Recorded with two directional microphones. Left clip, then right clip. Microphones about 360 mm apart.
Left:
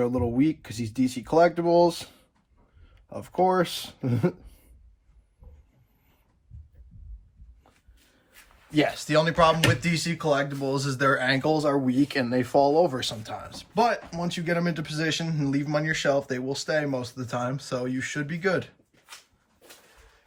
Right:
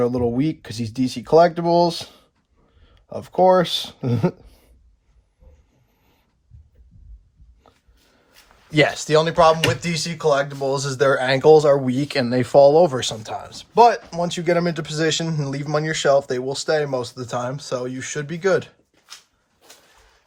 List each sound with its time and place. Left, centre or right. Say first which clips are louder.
0.0 s speech: right 4 dB; right
8.3 s a sound: right 3 dB; right
9.0 s speech: right 5 dB; centre